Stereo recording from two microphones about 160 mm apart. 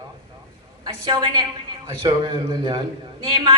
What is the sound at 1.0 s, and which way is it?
A man's voice, 30° right (ahead or behind).